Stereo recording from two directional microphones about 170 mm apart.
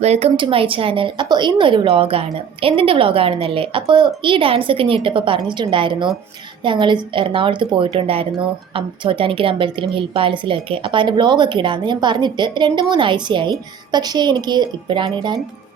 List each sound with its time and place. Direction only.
0.0 s a woman's voice: 40° right (ahead or behind)